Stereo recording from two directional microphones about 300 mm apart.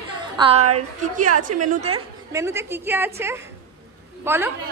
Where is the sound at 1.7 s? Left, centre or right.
Right.